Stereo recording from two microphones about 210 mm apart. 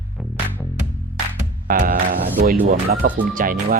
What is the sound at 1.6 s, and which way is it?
Music, 40° right (ahead or behind).